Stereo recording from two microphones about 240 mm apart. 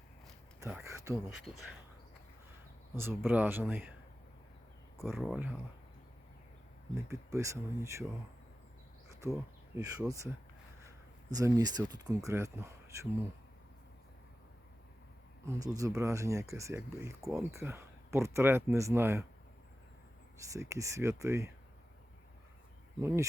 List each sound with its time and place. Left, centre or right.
0.9 s a sound: centre
2.9 s speech: centre
5.1 s speech: centre
6.9 s speech: centre
9.0 s speech: centre
11.3 s speech: centre
15.4 s speech: centre
20.4 s speech: centre
23.0 s speech: centre